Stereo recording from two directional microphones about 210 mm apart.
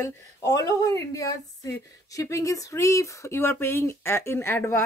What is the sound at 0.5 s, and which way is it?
A woman's voice, 15° left (ahead or behind).